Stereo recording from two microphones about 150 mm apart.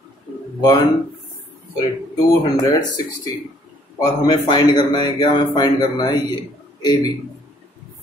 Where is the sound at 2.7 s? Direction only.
25° left (ahead or behind).